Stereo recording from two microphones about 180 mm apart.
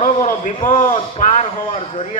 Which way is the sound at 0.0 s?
40° left (ahead or behind).